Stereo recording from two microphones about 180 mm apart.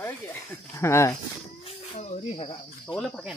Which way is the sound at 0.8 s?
15° left (ahead or behind).